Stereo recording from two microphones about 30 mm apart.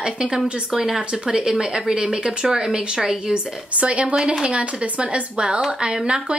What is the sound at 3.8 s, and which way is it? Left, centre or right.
Speech, right.